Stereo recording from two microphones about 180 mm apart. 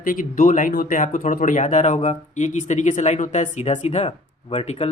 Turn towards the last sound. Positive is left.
turn(degrees=35)  # may be behind; listen again after turning